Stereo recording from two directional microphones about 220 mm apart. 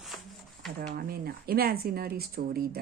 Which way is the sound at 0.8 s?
45° right (ahead or behind).